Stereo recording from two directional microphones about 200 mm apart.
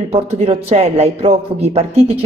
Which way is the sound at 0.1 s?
30° right (ahead or behind).